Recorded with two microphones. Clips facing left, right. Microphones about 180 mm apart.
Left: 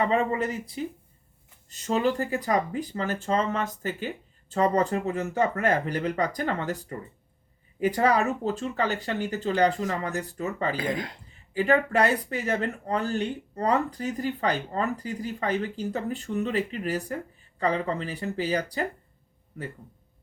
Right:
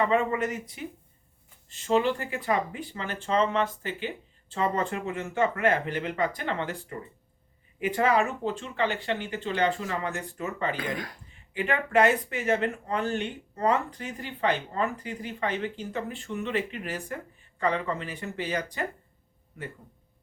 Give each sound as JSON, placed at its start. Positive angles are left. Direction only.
{"t": 0.1, "sound": "speech", "side_deg": 35}
{"t": 11.5, "sound": "speech", "side_deg": 35}